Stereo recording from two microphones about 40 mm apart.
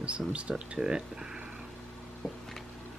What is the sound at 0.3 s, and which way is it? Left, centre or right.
Speech, right.